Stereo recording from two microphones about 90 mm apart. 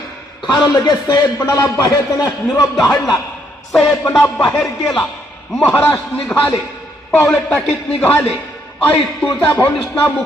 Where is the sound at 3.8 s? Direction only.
30° left (ahead or behind).